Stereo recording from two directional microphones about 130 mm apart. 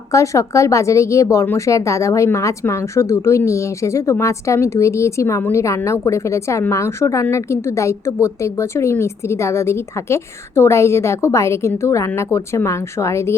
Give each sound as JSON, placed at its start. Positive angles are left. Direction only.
{"t": 0.1, "sound": "speech", "side_deg": 25}